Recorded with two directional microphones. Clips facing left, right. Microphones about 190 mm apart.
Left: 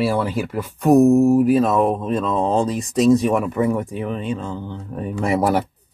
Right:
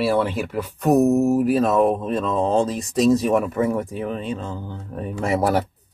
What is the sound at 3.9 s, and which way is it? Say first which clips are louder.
Speech: left 1 dB; 35° right (ahead or behind).